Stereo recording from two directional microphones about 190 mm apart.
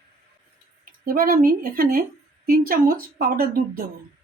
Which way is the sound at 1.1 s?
50° right (ahead or behind).